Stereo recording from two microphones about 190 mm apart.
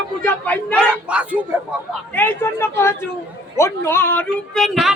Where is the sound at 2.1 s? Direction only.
10° left (ahead or behind).